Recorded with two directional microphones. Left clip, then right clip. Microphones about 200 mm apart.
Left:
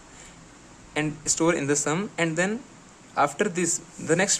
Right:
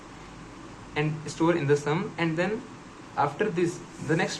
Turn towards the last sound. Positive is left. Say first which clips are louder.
# left 4 dB
turn(degrees=40)  # may be behind; listen again after turning